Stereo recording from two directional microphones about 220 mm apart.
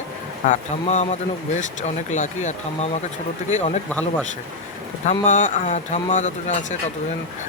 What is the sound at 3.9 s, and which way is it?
Speech, 5° left (ahead or behind).